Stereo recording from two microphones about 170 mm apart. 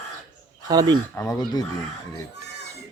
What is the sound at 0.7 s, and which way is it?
Speech, 20° right (ahead or behind).